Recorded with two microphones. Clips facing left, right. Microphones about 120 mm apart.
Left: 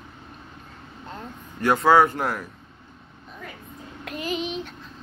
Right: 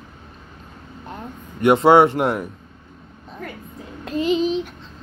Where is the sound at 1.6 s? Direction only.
25° right (ahead or behind).